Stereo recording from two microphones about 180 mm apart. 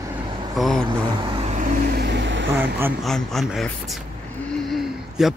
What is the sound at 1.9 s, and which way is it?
Vehicle, 75° right (ahead or behind).